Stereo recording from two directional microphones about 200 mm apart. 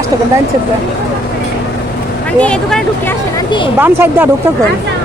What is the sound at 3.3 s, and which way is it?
Speech, 25° left (ahead or behind).